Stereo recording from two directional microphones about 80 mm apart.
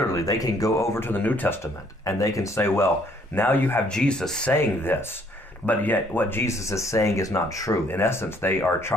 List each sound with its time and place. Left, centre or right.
0.1 s speech: left
0.9 s speech: left
2.0 s speech: left
3.9 s speech: centre
4.5 s speech: left
6.4 s speech: left
7.9 s speech: left